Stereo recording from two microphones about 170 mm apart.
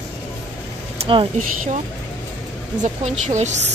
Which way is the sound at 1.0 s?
30° right (ahead or behind).